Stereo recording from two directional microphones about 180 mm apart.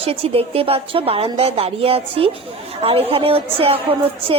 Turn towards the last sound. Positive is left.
turn(degrees=-30)  # may be behind; listen again after turning